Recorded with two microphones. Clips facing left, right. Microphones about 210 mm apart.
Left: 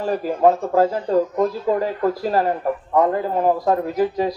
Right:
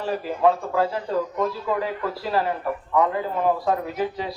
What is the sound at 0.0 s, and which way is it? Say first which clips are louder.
Speech: left 4 dB; 40° left (ahead or behind).